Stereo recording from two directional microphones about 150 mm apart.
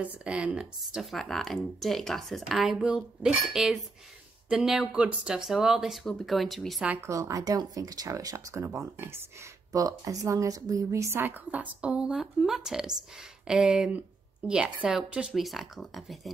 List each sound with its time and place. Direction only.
0.0 s speech: 10° right (ahead or behind)
6.9 s speech: 20° right (ahead or behind); by 16.2 s centre (ahead or behind)